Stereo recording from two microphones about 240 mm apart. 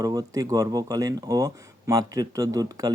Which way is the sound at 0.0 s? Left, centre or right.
Centre.